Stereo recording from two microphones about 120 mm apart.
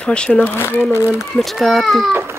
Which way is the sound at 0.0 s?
10° left (ahead or behind).